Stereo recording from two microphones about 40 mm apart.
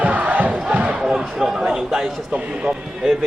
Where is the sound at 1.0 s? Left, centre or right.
Centre.